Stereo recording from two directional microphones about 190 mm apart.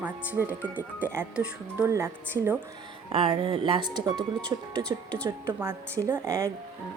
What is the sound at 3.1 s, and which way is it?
Speech, 30° right (ahead or behind).